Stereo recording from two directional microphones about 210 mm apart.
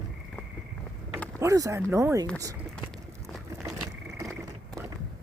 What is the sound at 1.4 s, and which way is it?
Speech, 15° right (ahead or behind).